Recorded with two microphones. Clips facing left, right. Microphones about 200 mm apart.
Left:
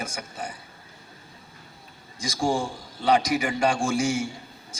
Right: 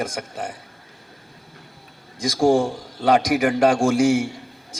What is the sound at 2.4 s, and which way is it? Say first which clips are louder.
A man's voice: right 8 dB; 65° right (ahead or behind).